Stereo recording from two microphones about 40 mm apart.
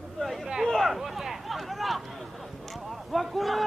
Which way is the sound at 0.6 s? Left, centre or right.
Centre.